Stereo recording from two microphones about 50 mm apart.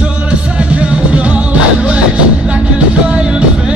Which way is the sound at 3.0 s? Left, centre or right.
Centre.